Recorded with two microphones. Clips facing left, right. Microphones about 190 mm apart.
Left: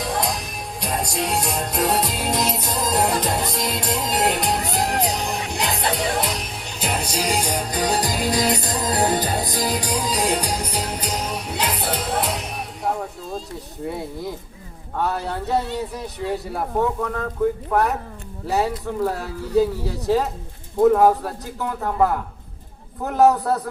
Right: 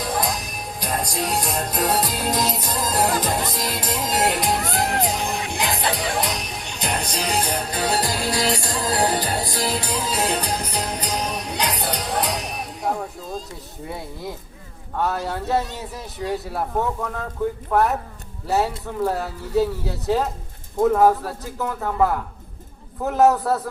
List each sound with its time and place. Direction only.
0.0 s music: centre (ahead or behind)
3.5 s a man's voice: centre (ahead or behind)
4.7 s music: centre (ahead or behind)
14.9 s a man's voice: centre (ahead or behind)
17.7 s a man's voice: centre (ahead or behind)
20.8 s a man's voice: centre (ahead or behind)